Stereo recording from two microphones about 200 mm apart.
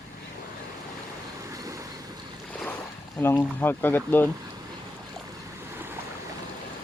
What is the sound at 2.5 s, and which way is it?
Boat, 5° left (ahead or behind).